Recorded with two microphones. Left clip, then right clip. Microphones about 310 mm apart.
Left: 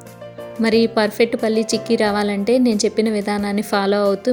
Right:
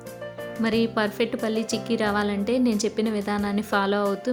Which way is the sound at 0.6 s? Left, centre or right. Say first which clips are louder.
Left 8 dB; centre.